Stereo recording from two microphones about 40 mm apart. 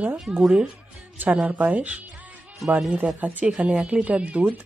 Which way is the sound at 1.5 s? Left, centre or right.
Right.